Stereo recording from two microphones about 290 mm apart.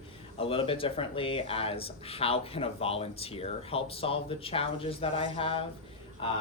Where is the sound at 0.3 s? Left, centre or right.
Centre.